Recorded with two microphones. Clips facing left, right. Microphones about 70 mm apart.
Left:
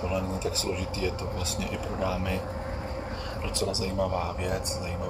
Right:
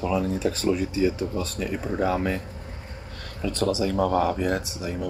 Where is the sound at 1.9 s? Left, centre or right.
Right.